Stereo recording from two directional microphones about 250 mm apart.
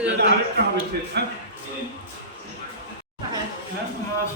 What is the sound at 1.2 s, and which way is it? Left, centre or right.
Speech, right.